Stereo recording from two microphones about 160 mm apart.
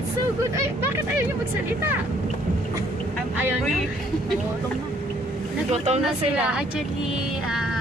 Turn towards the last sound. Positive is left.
turn(degrees=-5)  # may be behind; listen again after turning